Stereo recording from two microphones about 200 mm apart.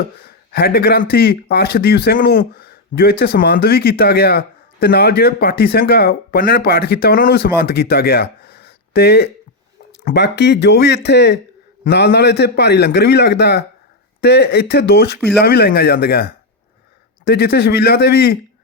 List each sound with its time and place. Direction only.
0.2 s a man's voice: 50° left (ahead or behind)